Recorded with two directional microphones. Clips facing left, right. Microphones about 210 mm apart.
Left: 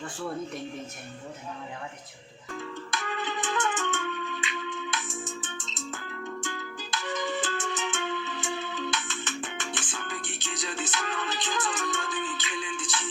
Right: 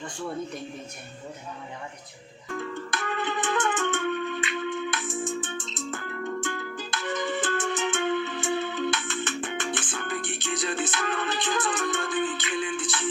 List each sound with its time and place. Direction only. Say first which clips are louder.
0.0 s speech: right 1 dB; centre (ahead or behind)
2.6 s music: right 3 dB; 55° right (ahead or behind)